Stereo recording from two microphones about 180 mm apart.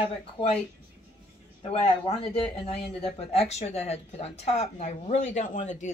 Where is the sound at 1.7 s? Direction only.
35° left (ahead or behind).